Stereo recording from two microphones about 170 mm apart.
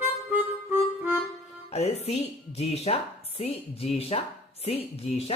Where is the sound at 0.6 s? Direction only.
10° right (ahead or behind).